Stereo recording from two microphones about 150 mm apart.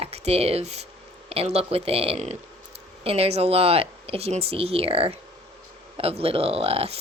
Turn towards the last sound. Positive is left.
turn(degrees=-40)  # may be behind; listen again after turning